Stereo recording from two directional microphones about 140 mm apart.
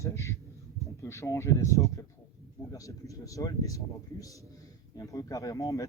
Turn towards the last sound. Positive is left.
turn(degrees=25)  # may be behind; listen again after turning